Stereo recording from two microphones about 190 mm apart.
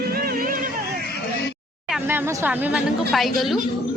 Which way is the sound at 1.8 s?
5° right (ahead or behind).